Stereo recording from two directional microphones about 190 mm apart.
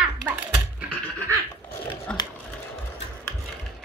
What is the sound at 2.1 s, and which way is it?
Sewing machine, 5° left (ahead or behind).